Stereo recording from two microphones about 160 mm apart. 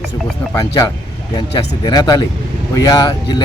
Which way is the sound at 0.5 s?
25° left (ahead or behind).